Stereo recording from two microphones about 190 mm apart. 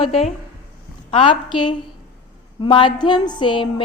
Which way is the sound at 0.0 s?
30° left (ahead or behind).